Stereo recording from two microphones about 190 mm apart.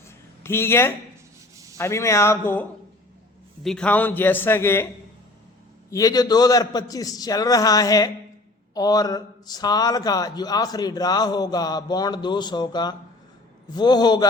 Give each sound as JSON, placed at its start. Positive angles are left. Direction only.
{"t": 0.4, "sound": "a man's voice", "side_deg": 15}
{"t": 5.9, "sound": "a man's voice", "side_deg": 20}